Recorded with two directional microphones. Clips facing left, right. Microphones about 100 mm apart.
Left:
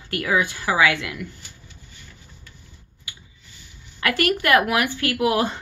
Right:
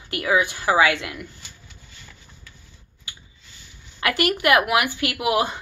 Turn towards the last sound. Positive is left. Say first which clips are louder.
# left 1 dB
turn(degrees=-15)  # may be behind; listen again after turning